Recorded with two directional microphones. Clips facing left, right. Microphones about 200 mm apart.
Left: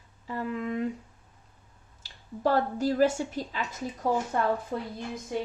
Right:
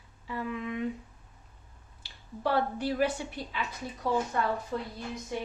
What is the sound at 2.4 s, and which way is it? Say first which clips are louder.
Speech: left 3 dB; 40° left (ahead or behind).